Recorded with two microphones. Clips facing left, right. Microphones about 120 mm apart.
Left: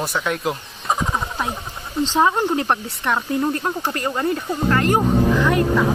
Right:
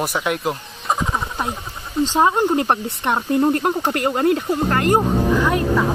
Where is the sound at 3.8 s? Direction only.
60° right (ahead or behind).